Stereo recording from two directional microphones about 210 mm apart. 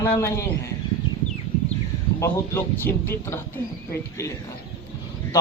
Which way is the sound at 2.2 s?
10° left (ahead or behind).